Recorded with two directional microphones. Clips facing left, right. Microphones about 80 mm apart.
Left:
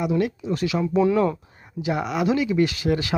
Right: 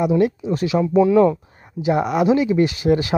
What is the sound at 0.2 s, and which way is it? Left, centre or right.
Speech, right.